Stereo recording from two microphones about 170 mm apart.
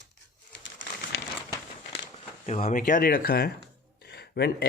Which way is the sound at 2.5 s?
45° left (ahead or behind).